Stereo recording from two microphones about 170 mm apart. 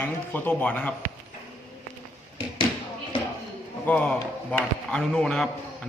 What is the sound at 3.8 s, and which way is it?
Speech, 10° left (ahead or behind).